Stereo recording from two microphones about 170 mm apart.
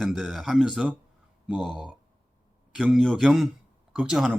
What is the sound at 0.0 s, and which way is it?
Speech, centre (ahead or behind).